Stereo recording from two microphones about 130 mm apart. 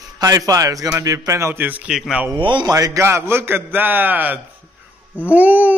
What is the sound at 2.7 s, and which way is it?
A man's voice, 25° right (ahead or behind).